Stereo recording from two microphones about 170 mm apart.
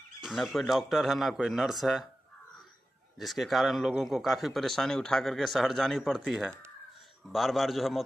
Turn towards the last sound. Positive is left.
turn(degrees=0)  # may be behind; listen again after turning